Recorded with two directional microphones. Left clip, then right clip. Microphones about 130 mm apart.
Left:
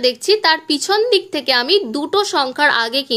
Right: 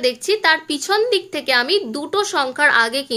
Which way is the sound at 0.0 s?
35° left (ahead or behind).